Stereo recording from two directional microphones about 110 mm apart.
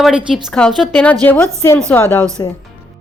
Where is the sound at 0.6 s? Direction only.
10° left (ahead or behind).